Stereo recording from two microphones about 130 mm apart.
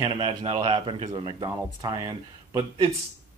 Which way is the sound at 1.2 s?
30° right (ahead or behind).